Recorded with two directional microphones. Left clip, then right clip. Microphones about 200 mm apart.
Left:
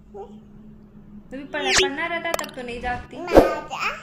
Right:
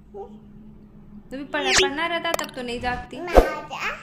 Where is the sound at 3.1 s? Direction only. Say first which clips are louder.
Left 3 dB; centre (ahead or behind).